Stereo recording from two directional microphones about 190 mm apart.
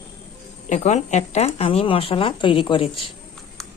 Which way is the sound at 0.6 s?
40° left (ahead or behind).